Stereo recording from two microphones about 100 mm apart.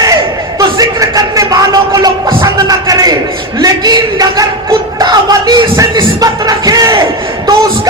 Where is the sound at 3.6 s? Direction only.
40° right (ahead or behind).